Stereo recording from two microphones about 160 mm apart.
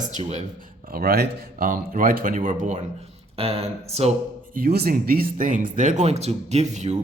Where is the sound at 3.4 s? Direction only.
40° right (ahead or behind).